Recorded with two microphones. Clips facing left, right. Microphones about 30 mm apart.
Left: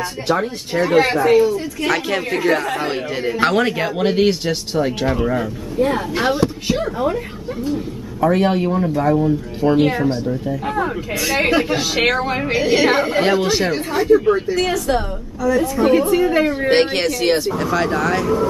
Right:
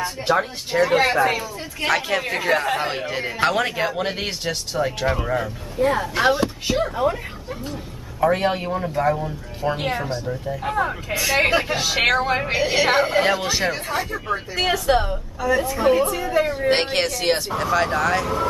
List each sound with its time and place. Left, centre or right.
0.3 s a man's voice: centre
8.2 s a man's voice: centre
14.7 s a woman's voice: right
16.1 s a woman's voice: left
16.7 s a man's voice: centre